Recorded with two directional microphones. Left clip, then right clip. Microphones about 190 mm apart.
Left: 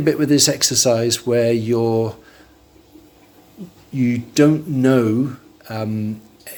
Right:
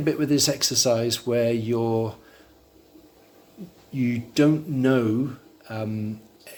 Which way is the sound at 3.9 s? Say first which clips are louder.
Left 6 dB; 10° left (ahead or behind).